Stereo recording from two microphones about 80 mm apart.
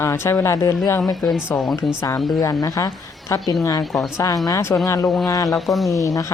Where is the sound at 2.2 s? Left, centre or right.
Left.